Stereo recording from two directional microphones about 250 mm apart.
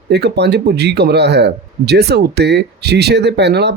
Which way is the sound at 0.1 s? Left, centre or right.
Right.